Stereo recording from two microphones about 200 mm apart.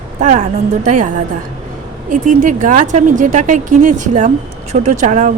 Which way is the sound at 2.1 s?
40° right (ahead or behind).